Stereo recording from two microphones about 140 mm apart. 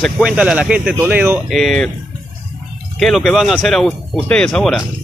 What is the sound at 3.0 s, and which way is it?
A man's voice, centre (ahead or behind).